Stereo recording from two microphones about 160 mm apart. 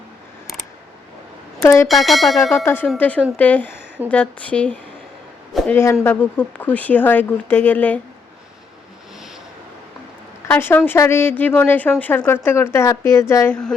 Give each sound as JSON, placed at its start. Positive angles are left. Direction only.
{"t": 1.6, "sound": "speech", "side_deg": 15}
{"t": 1.9, "sound": "speech", "side_deg": 0}
{"t": 2.6, "sound": "speech", "side_deg": 15}
{"t": 10.5, "sound": "speech", "side_deg": 10}